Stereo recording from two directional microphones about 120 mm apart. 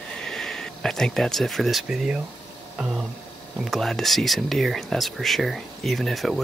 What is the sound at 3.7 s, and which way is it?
Speech, centre (ahead or behind).